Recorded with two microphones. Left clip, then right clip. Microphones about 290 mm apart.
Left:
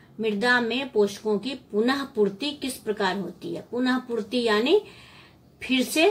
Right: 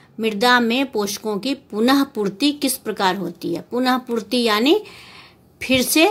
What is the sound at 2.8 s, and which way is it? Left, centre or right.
Speech, right.